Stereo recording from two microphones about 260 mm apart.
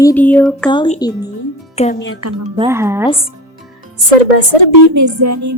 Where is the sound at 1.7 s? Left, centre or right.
Left.